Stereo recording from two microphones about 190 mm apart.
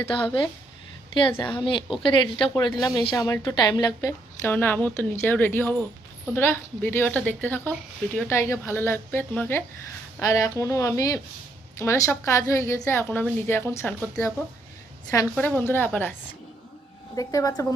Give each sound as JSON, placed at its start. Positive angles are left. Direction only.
{"t": 1.1, "sound": "a woman's voice", "side_deg": 25}
{"t": 15.1, "sound": "a woman's voice", "side_deg": 15}
{"t": 17.2, "sound": "a woman's voice", "side_deg": 20}